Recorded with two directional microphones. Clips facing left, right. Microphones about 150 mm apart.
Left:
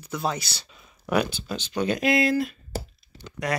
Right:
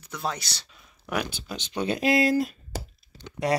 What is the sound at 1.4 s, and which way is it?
Speech, 20° right (ahead or behind).